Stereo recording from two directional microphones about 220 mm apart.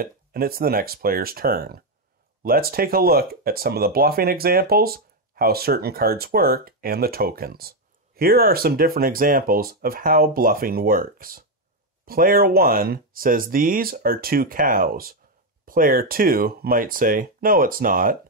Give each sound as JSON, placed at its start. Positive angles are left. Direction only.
{"t": 0.0, "sound": "speech", "side_deg": -40}